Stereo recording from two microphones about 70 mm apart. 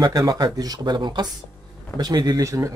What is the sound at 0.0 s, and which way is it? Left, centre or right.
Speech, right.